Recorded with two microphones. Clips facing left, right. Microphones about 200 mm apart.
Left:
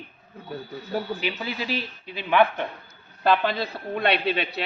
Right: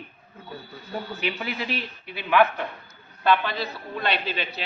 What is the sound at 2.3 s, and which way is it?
Speech, 20° left (ahead or behind).